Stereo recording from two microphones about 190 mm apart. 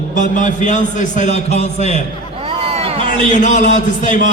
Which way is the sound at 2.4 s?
30° right (ahead or behind).